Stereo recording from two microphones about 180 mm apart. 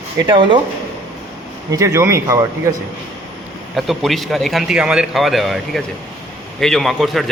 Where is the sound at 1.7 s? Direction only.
15° right (ahead or behind).